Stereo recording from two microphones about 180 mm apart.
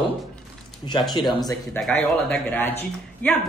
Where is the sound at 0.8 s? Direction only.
25° left (ahead or behind).